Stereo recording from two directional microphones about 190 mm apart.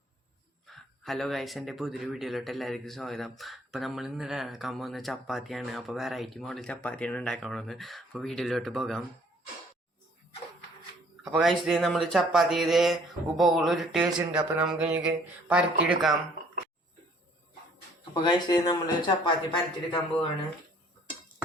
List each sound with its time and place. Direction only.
0.7 s speech: centre (ahead or behind)
11.2 s speech: centre (ahead or behind)
18.1 s speech: 25° left (ahead or behind)